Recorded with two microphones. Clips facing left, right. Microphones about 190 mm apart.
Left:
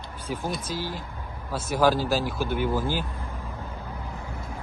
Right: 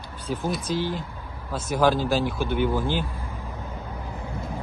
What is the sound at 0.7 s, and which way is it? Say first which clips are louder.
Speech: right 5 dB; 55° right (ahead or behind).